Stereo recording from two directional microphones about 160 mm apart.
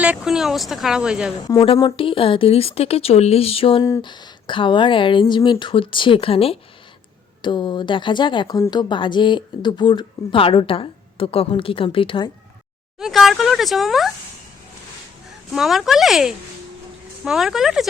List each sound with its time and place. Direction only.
0.0 s speech: 5° right (ahead or behind)
1.4 s speech: 30° left (ahead or behind)
3.8 s speech: 25° left (ahead or behind)
13.0 s speech: centre (ahead or behind)
15.5 s speech: centre (ahead or behind)